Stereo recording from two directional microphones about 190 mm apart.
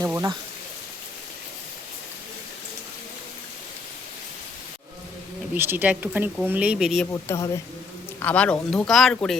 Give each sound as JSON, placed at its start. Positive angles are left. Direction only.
{"t": 0.0, "sound": "a sound", "side_deg": -15}
{"t": 5.5, "sound": "speech", "side_deg": -10}
{"t": 7.1, "sound": "speech", "side_deg": 15}